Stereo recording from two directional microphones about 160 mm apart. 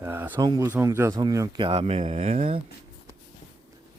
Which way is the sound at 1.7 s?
40° right (ahead or behind).